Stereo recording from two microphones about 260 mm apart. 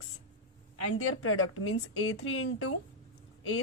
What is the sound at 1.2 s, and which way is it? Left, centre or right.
A woman's voice, left.